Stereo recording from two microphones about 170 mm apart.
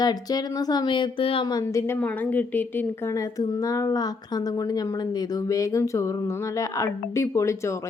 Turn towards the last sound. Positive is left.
turn(degrees=15)  # may be behind; listen again after turning